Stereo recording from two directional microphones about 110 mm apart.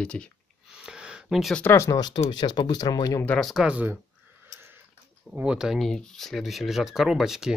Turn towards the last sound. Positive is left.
turn(degrees=-5)  # may be behind; listen again after turning